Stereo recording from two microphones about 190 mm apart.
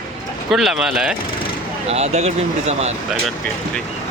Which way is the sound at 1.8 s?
35° right (ahead or behind).